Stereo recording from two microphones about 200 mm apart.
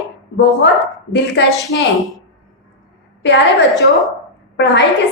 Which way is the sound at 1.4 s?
60° left (ahead or behind).